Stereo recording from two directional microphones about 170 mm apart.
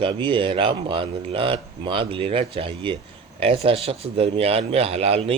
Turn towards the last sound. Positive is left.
turn(degrees=-35)  # may be behind; listen again after turning